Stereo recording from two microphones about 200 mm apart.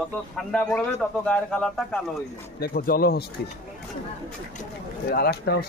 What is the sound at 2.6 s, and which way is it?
Speech, 45° left (ahead or behind).